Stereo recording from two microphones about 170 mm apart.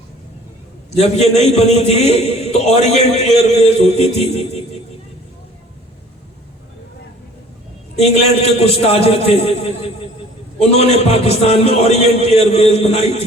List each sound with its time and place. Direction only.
0.9 s a man's voice: 40° left (ahead or behind)
8.4 s a man's voice: 40° left (ahead or behind)